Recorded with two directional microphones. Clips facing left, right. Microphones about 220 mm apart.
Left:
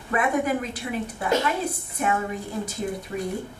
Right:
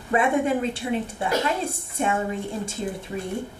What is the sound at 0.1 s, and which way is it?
A woman's voice, 30° right (ahead or behind).